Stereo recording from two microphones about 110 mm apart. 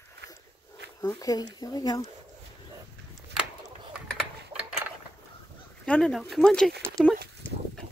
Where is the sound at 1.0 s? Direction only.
35° left (ahead or behind).